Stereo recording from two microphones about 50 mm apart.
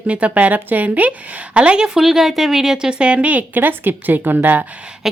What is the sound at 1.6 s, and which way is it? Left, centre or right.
Speech, centre.